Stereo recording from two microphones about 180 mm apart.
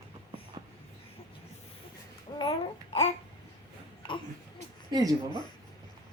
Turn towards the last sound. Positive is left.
turn(degrees=-20)  # may be behind; listen again after turning